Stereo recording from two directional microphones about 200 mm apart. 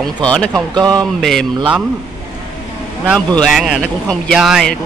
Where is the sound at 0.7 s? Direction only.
20° right (ahead or behind).